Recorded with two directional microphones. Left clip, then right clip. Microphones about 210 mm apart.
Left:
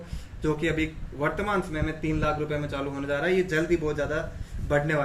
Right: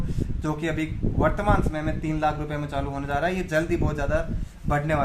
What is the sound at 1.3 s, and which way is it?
A man's voice, 40° right (ahead or behind).